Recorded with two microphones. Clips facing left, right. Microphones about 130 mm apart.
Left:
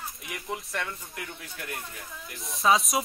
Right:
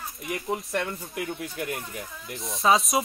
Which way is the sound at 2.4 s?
Centre (ahead or behind).